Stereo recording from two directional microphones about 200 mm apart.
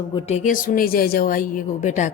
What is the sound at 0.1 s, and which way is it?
Speech, 30° left (ahead or behind).